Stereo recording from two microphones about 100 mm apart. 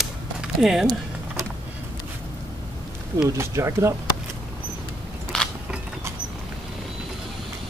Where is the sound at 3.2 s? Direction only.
30° right (ahead or behind).